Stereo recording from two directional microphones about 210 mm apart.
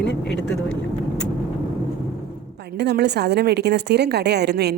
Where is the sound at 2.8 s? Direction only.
55° right (ahead or behind).